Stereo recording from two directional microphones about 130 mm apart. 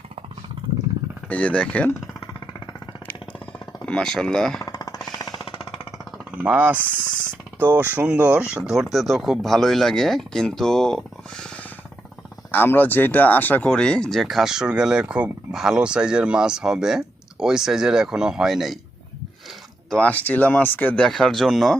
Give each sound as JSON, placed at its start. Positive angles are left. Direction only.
{"t": 1.3, "sound": "speech", "side_deg": 10}
{"t": 3.8, "sound": "speech", "side_deg": 5}
{"t": 4.6, "sound": "a sound", "side_deg": 30}
{"t": 6.3, "sound": "speech", "side_deg": -10}
{"t": 19.9, "sound": "speech", "side_deg": 10}